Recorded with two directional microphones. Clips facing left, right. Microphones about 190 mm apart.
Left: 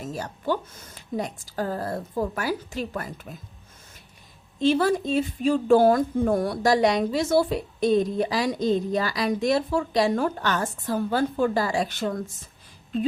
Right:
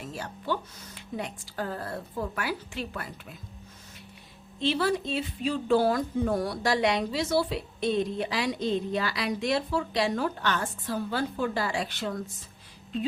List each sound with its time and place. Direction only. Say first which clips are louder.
0.0 s speech: left 6 dB; 45° left (ahead or behind)
4.6 s speech: left 6 dB; 45° left (ahead or behind)